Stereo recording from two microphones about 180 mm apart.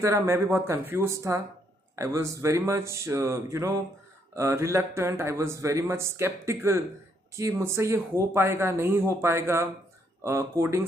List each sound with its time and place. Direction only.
0.0 s speech: 15° right (ahead or behind)